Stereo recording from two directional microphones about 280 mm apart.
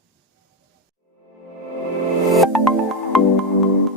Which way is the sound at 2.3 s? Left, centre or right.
Centre.